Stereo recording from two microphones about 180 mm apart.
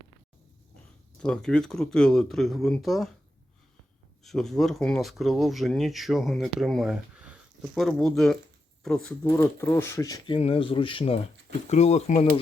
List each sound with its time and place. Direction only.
1.2 s speech: 5° left (ahead or behind)
4.2 s speech: centre (ahead or behind)
9.2 s speech: 15° left (ahead or behind); by 12.4 s 35° left (ahead or behind)